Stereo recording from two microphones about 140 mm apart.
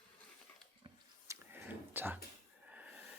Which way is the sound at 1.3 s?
15° right (ahead or behind).